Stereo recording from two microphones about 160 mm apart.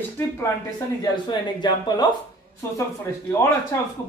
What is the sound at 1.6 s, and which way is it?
Speech, 25° left (ahead or behind).